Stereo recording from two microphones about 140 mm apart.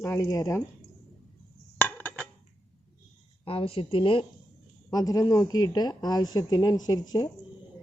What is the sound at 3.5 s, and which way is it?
Speech, 40° left (ahead or behind).